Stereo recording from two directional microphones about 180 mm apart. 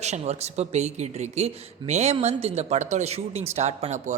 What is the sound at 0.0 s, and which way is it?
Speech, 40° right (ahead or behind).